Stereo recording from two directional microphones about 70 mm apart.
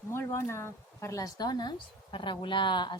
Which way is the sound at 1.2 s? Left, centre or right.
Left.